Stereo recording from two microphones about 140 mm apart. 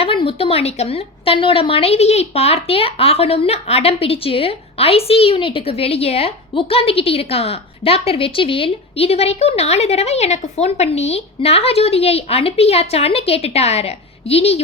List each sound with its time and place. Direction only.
0.0 s a woman's voice: 40° left (ahead or behind)